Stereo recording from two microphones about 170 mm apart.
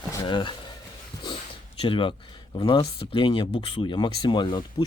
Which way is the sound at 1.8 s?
30° left (ahead or behind).